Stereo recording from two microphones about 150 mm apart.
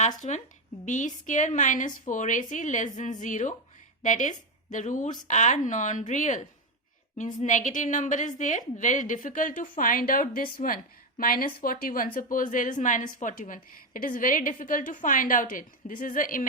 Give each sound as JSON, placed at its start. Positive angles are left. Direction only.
{"t": 0.2, "sound": "a woman's voice", "side_deg": 55}